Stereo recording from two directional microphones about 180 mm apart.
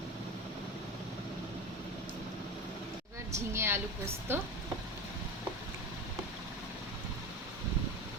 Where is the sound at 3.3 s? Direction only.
15° right (ahead or behind).